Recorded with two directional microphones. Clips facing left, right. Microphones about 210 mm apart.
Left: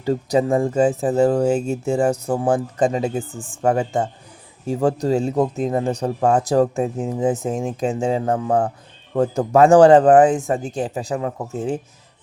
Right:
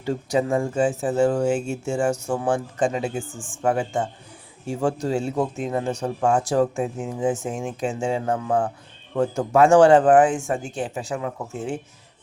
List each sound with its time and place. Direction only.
0.0 s speech: 35° left (ahead or behind)
3.2 s speech: 60° left (ahead or behind)
3.6 s speech: 40° left (ahead or behind)